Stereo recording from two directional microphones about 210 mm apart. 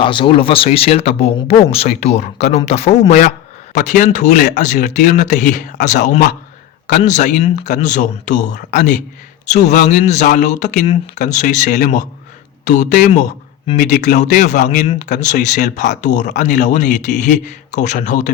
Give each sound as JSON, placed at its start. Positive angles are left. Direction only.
{"t": 0.0, "sound": "speech", "side_deg": 25}
{"t": 4.6, "sound": "speech", "side_deg": 35}